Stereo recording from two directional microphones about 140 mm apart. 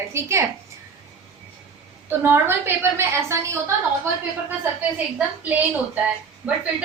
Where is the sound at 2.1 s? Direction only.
15° right (ahead or behind).